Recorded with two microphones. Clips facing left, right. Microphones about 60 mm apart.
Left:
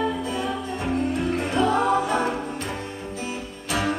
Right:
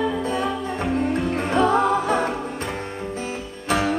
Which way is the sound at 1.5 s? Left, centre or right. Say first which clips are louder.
Right 4 dB; right.